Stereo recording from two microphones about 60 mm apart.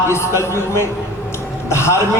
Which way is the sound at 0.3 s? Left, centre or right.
Left.